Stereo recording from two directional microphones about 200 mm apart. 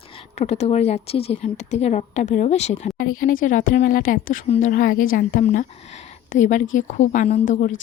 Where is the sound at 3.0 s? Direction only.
45° left (ahead or behind).